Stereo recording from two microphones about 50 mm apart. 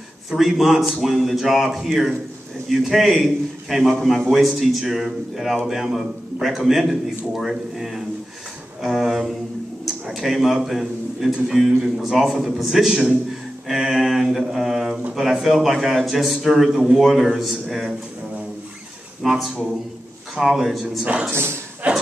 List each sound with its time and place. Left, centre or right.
0.3 s a man's voice: centre
13.7 s a sound: centre
15.1 s a man's voice: centre
19.2 s a man's voice: centre
21.0 s speech: right
21.3 s a man's voice: right
21.8 s a sound: right